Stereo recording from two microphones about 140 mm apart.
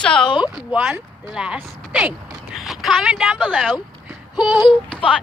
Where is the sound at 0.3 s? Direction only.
35° left (ahead or behind).